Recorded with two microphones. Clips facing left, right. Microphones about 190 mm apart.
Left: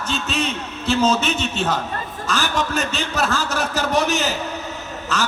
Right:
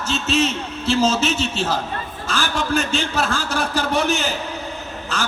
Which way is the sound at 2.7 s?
40° left (ahead or behind).